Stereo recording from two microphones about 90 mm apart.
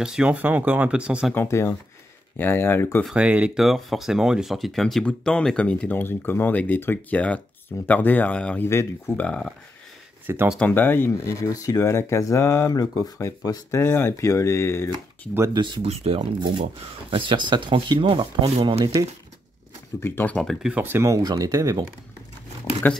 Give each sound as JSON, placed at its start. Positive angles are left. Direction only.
{"t": 0.0, "sound": "speech", "side_deg": -10}
{"t": 1.3, "sound": "speech", "side_deg": 25}
{"t": 3.1, "sound": "speech", "side_deg": -15}
{"t": 3.6, "sound": "speech", "side_deg": 0}
{"t": 8.6, "sound": "speech", "side_deg": 30}
{"t": 9.1, "sound": "speech", "side_deg": 15}
{"t": 10.2, "sound": "speech", "side_deg": -25}
{"t": 10.6, "sound": "speech", "side_deg": 20}
{"t": 11.2, "sound": "speech", "side_deg": 40}
{"t": 13.7, "sound": "speech", "side_deg": 25}
{"t": 15.5, "sound": "speech", "side_deg": -75}
{"t": 20.0, "sound": "speech", "side_deg": 25}
{"t": 21.0, "sound": "speech", "side_deg": -40}
{"t": 22.8, "sound": "speech", "side_deg": 20}